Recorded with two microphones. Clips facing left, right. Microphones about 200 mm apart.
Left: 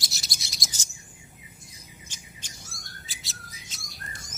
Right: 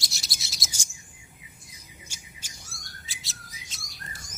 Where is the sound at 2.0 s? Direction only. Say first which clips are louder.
Left 2 dB; 10° right (ahead or behind).